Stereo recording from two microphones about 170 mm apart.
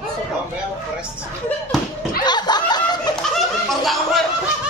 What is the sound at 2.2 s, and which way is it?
Snicker, 25° left (ahead or behind).